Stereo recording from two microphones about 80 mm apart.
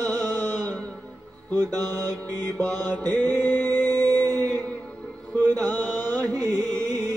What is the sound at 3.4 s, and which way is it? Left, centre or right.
Music, right.